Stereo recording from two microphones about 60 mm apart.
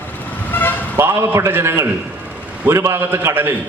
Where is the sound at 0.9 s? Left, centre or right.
Right.